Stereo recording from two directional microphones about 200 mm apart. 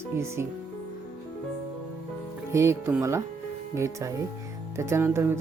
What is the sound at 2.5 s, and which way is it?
Speech, 15° right (ahead or behind).